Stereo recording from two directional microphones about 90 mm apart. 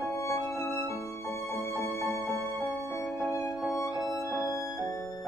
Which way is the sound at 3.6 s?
Centre (ahead or behind).